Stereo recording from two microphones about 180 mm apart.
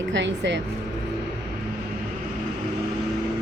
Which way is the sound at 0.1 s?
85° right.